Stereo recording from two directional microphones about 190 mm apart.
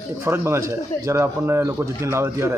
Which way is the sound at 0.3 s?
15° right (ahead or behind).